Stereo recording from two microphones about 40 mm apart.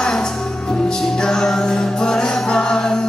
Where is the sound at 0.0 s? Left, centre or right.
Centre.